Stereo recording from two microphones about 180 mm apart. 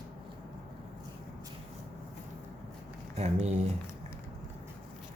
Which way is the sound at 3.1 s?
35° right (ahead or behind).